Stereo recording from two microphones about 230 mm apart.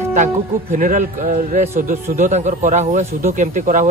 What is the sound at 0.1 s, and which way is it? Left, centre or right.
Speech, right.